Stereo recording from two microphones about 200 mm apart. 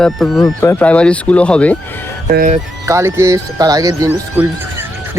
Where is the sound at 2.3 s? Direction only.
45° right (ahead or behind).